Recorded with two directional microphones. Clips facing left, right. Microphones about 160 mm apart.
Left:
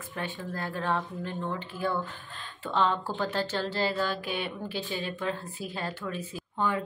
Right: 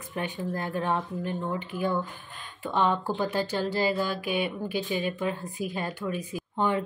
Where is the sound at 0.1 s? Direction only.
20° right (ahead or behind).